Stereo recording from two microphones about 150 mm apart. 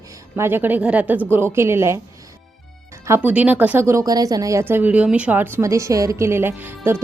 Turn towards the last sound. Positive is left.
turn(degrees=-15)  # may be behind; listen again after turning